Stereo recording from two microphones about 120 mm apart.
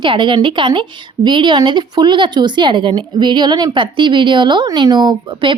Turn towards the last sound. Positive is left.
turn(degrees=-40)  # may be behind; listen again after turning